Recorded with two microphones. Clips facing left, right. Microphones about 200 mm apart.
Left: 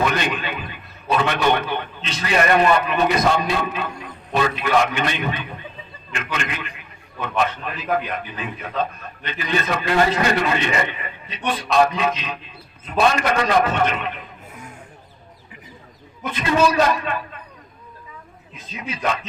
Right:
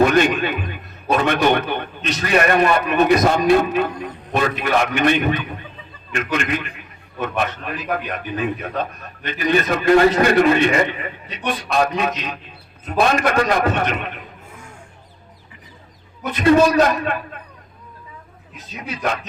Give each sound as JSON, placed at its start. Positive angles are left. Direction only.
{"t": 0.0, "sound": "a man's voice", "side_deg": -50}
{"t": 16.3, "sound": "a man's voice", "side_deg": -55}